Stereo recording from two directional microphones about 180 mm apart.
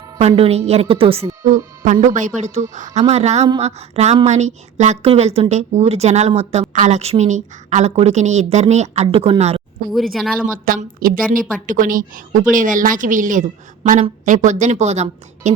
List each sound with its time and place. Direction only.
0.2 s a woman's voice: 35° right (ahead or behind)
1.8 s a woman's voice: 40° right (ahead or behind)
9.9 s speech: centre (ahead or behind)
10.4 s a woman's voice: 50° right (ahead or behind)